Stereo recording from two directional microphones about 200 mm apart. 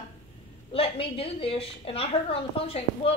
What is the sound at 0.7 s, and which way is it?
A woman's voice, 30° left (ahead or behind).